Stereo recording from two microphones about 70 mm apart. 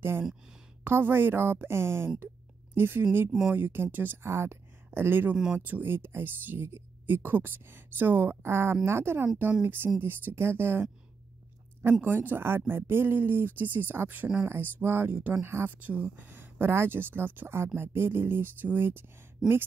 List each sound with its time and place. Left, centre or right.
0.8 s speech: right
3.3 s speech: centre
3.5 s speech: right
5.3 s speech: centre
5.7 s speech: right
14.4 s speech: right